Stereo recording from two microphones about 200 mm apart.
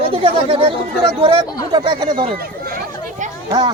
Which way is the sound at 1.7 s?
25° right (ahead or behind).